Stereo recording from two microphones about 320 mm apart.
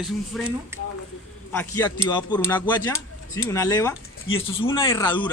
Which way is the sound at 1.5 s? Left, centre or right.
Centre.